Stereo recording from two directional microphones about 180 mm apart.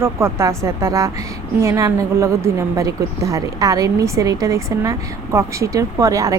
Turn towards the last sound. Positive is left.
turn(degrees=-20)  # may be behind; listen again after turning